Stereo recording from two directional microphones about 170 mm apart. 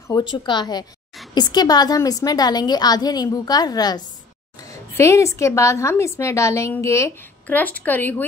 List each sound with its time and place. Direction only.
0.1 s a woman's voice: 25° left (ahead or behind)